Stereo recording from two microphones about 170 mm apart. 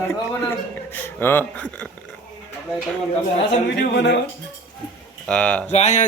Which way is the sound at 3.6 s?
85° left.